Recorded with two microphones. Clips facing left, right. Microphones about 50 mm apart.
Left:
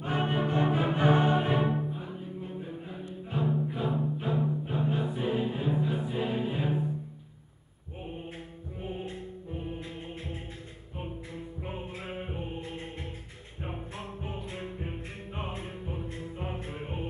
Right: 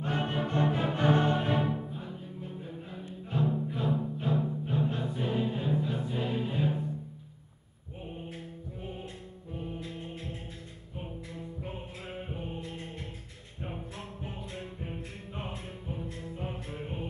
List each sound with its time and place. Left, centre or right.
0.0 s music: centre
9.8 s music: centre
11.6 s music: left